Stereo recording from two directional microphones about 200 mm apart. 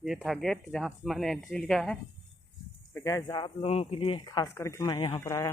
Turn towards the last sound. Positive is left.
turn(degrees=15)  # may be behind; listen again after turning